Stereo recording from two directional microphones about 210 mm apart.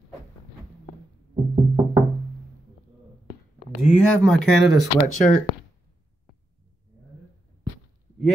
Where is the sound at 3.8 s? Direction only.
5° left (ahead or behind).